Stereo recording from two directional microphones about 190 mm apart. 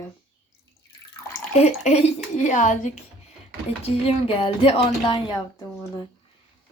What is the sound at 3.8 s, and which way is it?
Speech, 30° left (ahead or behind).